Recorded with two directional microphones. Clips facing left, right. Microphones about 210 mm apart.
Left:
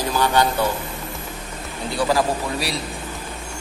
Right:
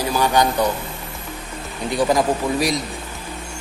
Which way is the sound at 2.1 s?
15° right (ahead or behind).